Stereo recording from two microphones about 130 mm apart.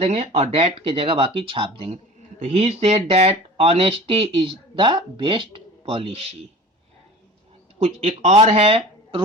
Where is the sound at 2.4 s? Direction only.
55° right (ahead or behind).